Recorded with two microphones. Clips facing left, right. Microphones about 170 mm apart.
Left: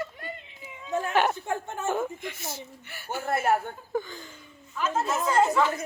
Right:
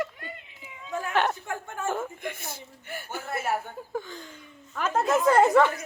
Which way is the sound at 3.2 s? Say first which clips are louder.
Left 6 dB; 55° left (ahead or behind).